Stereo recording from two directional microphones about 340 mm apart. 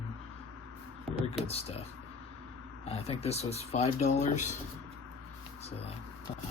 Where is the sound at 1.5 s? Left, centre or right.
Centre.